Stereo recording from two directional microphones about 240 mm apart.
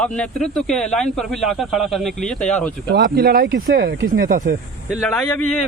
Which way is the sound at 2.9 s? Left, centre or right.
Right.